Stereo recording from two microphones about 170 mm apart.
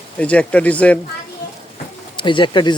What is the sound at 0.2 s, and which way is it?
Speech, 5° left (ahead or behind).